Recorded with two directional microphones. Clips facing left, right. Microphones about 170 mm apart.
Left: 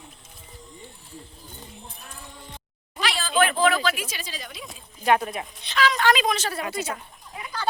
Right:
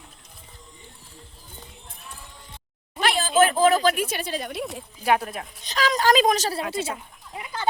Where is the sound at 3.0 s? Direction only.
50° right (ahead or behind).